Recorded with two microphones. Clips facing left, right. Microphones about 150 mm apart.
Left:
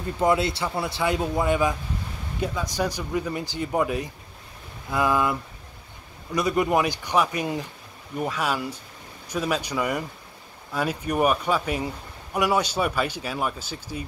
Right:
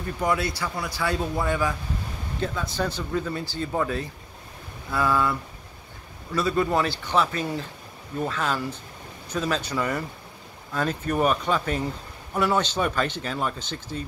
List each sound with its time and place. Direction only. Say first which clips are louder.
0.0 s a man's voice: left 3 dB; 25° left (ahead or behind)